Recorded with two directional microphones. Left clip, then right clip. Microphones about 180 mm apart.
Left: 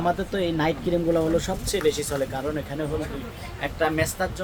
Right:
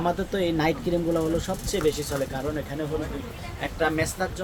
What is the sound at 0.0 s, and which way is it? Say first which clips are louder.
Speech: left 1 dB; 5° right (ahead or behind).